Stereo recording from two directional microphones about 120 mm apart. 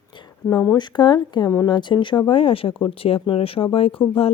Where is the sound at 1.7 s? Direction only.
40° left (ahead or behind).